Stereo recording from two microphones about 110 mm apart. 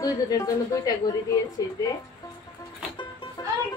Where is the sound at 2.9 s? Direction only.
45° left (ahead or behind).